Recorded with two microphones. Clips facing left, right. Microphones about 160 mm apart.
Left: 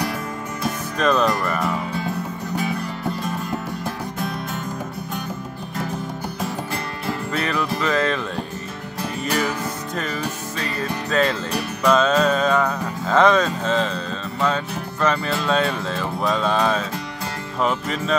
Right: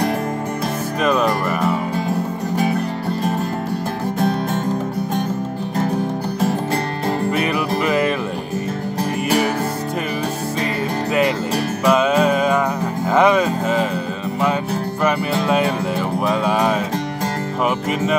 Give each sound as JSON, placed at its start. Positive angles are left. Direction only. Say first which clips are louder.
{"t": 1.0, "sound": "speech", "louder": "right 1 dB", "side_deg": -10}
{"t": 7.3, "sound": "music", "louder": "right 4 dB", "side_deg": -15}
{"t": 11.8, "sound": "music", "louder": "right 1 dB", "side_deg": -10}
{"t": 15.0, "sound": "music", "louder": "right 1 dB", "side_deg": -15}